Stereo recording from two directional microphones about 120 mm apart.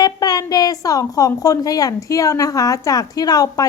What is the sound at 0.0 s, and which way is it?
A woman's voice, 30° left (ahead or behind).